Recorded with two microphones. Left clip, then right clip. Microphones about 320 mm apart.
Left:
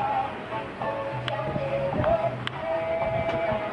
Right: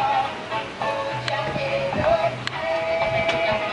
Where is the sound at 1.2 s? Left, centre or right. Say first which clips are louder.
Right 4 dB; centre.